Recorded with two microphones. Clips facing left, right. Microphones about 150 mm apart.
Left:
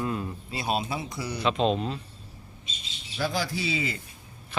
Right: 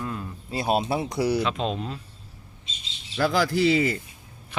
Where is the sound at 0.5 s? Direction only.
45° right (ahead or behind).